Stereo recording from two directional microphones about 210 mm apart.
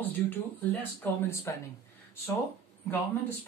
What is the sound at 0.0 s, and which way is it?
Speech, 10° left (ahead or behind).